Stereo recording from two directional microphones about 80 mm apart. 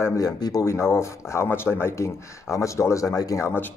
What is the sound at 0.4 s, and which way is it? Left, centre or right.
Speech, left.